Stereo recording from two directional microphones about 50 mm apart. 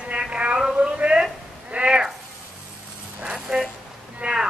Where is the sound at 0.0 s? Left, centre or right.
Right.